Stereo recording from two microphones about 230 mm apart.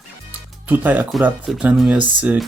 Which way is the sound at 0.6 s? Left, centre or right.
Centre.